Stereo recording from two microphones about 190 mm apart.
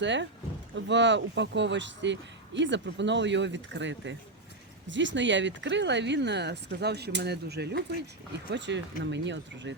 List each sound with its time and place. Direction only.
0.0 s speech: 70° right (ahead or behind)